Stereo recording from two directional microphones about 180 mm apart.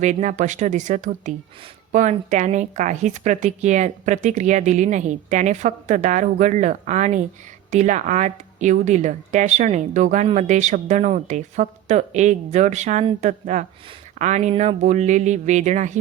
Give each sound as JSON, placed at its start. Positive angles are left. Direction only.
{"t": 0.0, "sound": "speech", "side_deg": -40}